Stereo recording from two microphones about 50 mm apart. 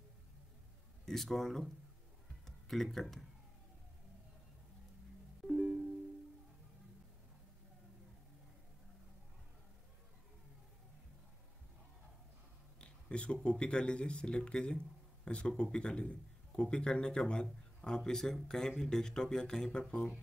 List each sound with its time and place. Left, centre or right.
1.0 s speech: centre
12.8 s speech: left